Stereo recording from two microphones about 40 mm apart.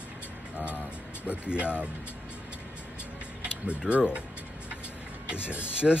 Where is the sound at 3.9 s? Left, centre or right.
Right.